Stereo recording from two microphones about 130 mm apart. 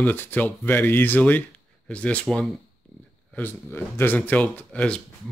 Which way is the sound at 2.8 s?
10° left (ahead or behind).